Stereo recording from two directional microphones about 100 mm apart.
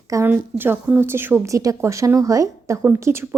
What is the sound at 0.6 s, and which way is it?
A woman's voice, 20° right (ahead or behind).